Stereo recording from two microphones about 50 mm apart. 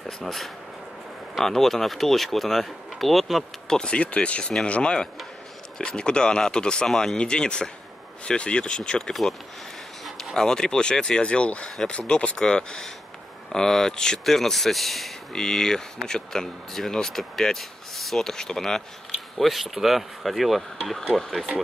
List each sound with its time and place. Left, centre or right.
0.2 s speech: centre
3.6 s speech: centre
6.9 s speech: centre
7.2 s speech: centre
10.3 s speech: centre
19.3 s speech: centre